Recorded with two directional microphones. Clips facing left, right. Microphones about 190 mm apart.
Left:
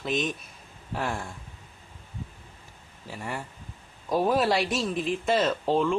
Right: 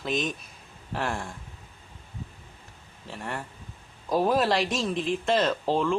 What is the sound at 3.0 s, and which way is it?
Speech, 5° left (ahead or behind).